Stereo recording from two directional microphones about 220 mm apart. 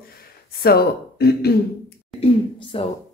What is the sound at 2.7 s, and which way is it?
Speech, 25° left (ahead or behind).